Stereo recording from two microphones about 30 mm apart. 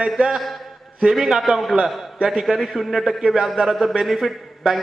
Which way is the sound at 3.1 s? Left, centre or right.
Centre.